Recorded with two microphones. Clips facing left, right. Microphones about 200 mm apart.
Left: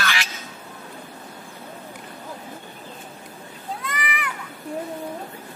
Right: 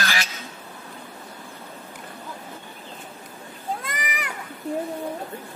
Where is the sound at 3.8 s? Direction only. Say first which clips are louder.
Left 2 dB; 45° right (ahead or behind).